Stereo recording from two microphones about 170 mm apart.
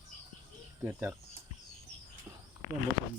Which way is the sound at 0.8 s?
15° right (ahead or behind).